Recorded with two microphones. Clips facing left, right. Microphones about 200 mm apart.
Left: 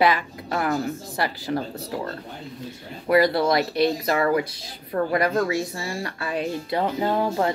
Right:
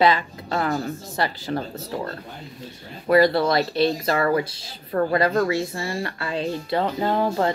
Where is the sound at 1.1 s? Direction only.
20° right (ahead or behind).